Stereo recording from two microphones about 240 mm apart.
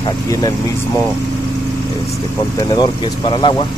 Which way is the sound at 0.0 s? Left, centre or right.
Centre.